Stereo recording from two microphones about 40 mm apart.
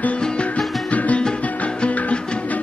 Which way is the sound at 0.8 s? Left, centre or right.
Left.